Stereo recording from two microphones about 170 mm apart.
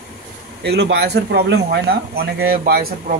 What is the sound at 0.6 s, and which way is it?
Speech, 80° right.